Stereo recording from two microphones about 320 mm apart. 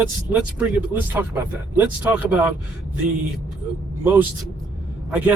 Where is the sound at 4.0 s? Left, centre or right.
Centre.